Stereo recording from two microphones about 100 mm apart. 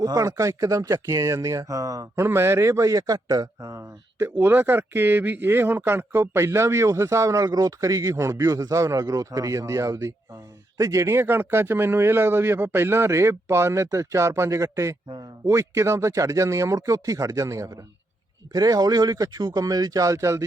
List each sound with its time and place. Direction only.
0.0 s speech: 35° right (ahead or behind)
2.2 s a man's voice: 25° right (ahead or behind)